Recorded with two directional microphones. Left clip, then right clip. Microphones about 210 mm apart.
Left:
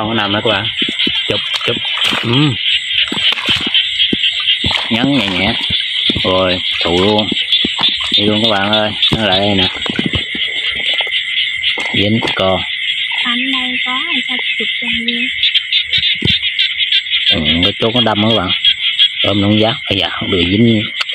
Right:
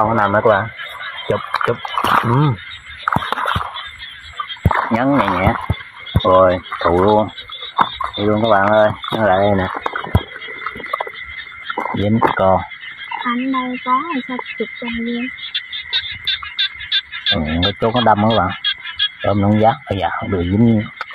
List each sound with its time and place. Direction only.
0.2 s speech: 25° left (ahead or behind)
2.1 s speech: 15° left (ahead or behind)
4.9 s speech: 30° left (ahead or behind)
7.0 s speech: 15° left (ahead or behind)
8.5 s speech: 35° left (ahead or behind)
17.6 s speech: 40° left (ahead or behind)
19.5 s speech: 30° left (ahead or behind)
20.5 s speech: 15° left (ahead or behind)